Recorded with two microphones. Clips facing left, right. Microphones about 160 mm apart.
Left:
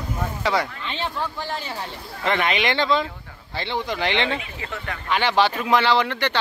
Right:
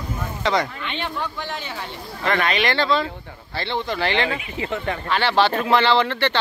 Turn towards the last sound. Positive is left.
turn(degrees=10)  # may be behind; listen again after turning